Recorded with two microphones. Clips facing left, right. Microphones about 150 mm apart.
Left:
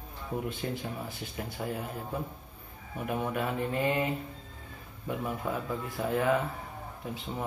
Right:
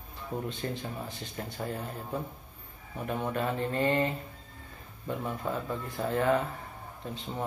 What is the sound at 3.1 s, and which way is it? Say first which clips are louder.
Speech: even; 10° left (ahead or behind).